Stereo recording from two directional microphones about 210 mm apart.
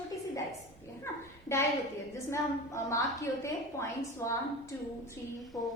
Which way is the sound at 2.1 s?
15° left (ahead or behind).